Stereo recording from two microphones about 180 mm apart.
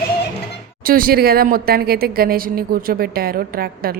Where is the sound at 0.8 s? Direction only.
55° right (ahead or behind).